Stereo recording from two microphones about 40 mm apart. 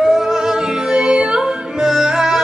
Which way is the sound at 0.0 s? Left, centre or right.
Centre.